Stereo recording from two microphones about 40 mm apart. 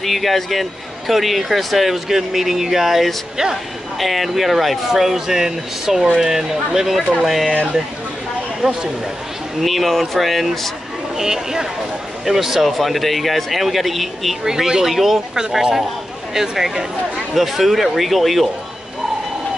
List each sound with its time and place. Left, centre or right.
0.0 s speech: centre
7.2 s speech: centre
8.6 s speech: right
9.6 s speech: centre
11.1 s speech: centre
14.4 s speech: centre